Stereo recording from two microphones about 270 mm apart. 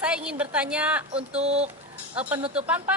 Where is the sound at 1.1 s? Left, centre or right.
Right.